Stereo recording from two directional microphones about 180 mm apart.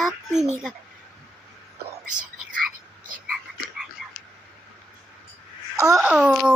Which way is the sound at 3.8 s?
5° right (ahead or behind).